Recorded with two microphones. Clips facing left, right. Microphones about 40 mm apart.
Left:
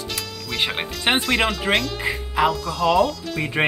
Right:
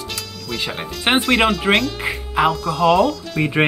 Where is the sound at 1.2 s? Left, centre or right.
Centre.